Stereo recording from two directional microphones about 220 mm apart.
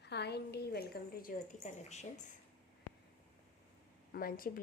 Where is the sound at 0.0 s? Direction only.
50° left (ahead or behind); by 2.3 s 30° left (ahead or behind).